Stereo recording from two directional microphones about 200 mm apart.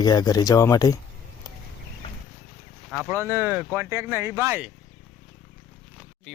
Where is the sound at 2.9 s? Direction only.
10° right (ahead or behind).